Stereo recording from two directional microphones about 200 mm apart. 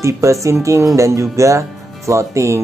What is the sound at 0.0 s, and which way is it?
Speech, 15° right (ahead or behind).